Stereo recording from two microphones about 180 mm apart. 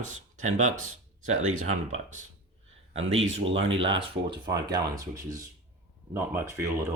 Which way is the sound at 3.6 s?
90° right.